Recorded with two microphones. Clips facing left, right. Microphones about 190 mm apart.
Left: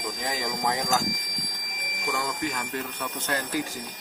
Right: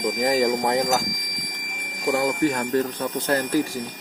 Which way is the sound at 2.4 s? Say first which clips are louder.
Right 10 dB; 40° right (ahead or behind).